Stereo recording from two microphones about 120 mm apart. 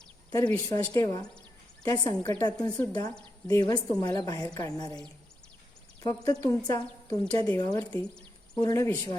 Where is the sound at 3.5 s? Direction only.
30° left (ahead or behind).